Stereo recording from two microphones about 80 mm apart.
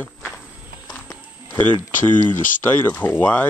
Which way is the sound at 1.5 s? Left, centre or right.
Left.